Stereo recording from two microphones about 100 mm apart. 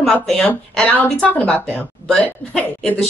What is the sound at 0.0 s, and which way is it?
A woman's voice, 5° left (ahead or behind).